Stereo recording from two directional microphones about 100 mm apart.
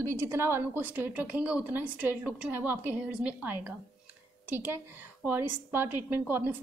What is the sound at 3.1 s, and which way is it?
A woman's voice, 10° right (ahead or behind).